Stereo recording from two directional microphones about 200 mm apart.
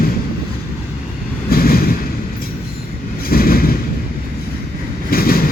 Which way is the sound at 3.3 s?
50° left (ahead or behind).